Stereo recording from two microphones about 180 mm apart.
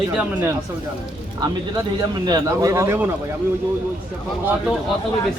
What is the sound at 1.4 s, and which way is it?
Speech, 20° right (ahead or behind).